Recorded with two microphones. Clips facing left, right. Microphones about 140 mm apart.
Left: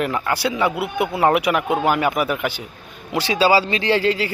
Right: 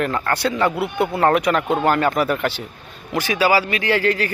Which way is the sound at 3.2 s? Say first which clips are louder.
Left 1 dB; 20° left (ahead or behind).